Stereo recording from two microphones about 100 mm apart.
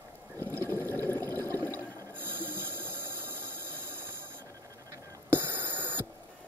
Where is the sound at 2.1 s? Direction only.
20° right (ahead or behind).